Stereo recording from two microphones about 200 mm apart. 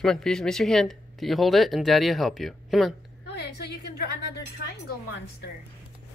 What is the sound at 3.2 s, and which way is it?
A woman's voice, 55° left (ahead or behind).